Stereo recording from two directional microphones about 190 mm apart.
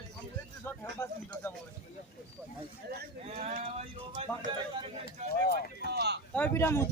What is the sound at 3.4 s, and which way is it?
Speech, 35° right (ahead or behind).